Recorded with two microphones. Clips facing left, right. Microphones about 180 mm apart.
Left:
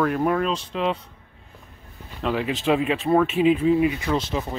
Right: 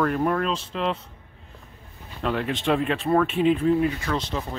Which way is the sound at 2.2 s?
Centre (ahead or behind).